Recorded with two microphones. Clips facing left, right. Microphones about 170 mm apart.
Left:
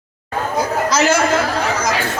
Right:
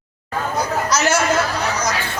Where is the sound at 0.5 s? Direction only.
90° left.